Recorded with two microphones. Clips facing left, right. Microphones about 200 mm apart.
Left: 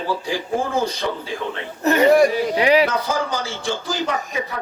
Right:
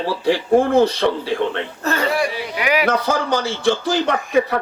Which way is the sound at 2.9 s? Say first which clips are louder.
Right 4 dB; 65° right (ahead or behind).